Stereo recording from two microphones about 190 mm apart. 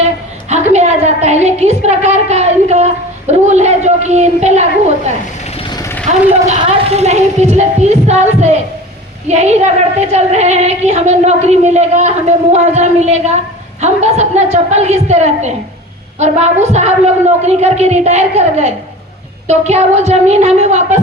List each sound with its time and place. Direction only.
0.5 s a woman's voice: 35° right (ahead or behind)
5.5 s vehicle: 20° left (ahead or behind)
6.5 s a woman's voice: 35° right (ahead or behind)